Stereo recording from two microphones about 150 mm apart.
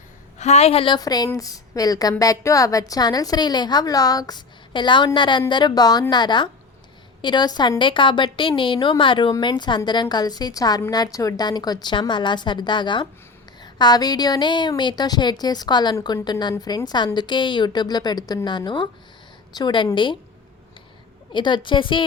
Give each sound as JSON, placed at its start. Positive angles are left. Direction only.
{"t": 0.3, "sound": "a woman's voice", "side_deg": 45}
{"t": 0.9, "sound": "a woman's voice", "side_deg": 25}
{"t": 21.3, "sound": "a woman's voice", "side_deg": 30}